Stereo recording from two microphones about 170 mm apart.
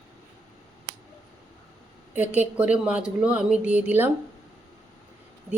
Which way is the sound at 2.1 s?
10° right (ahead or behind).